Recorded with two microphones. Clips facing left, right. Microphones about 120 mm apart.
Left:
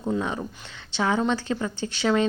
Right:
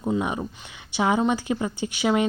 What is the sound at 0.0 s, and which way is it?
A woman's voice, 15° right (ahead or behind).